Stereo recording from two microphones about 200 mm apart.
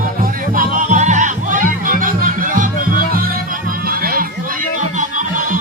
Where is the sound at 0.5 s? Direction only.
40° right (ahead or behind).